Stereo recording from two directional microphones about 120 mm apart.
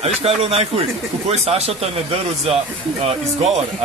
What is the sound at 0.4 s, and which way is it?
Speech, 55° right (ahead or behind).